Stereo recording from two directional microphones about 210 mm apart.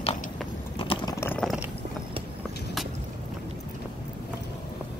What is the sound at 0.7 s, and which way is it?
Chewing, 20° left (ahead or behind).